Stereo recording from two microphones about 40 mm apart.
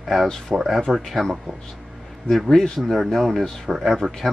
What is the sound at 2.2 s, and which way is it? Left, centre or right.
Speech, centre.